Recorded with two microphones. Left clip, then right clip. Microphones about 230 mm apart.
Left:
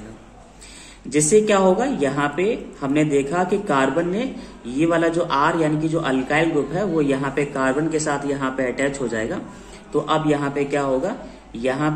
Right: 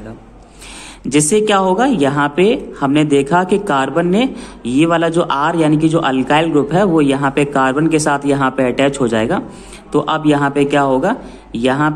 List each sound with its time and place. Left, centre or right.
1.0 s a woman's voice: right